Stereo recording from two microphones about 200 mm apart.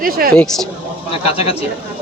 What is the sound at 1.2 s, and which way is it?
Speech, 30° left (ahead or behind).